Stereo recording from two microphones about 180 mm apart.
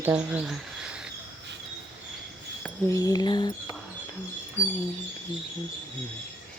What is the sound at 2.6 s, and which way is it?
Speech, 15° left (ahead or behind).